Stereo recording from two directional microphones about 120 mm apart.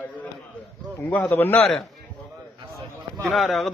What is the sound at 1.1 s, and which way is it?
Speech, 10° left (ahead or behind).